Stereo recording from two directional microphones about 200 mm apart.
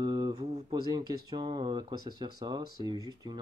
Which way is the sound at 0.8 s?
20° right (ahead or behind).